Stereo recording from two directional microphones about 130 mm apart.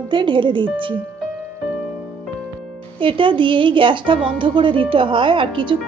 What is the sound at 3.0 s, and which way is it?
A woman's voice, 40° right (ahead or behind).